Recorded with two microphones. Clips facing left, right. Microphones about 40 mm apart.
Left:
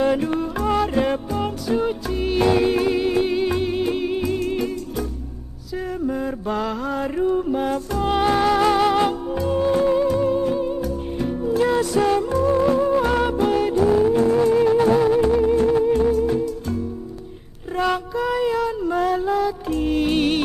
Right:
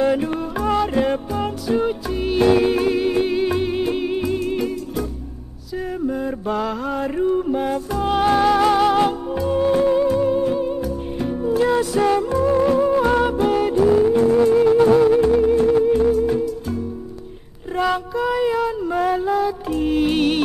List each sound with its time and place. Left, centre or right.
0.0 s music: centre
6.0 s mantra: centre
8.1 s music: centre
12.3 s music: centre
13.0 s music: centre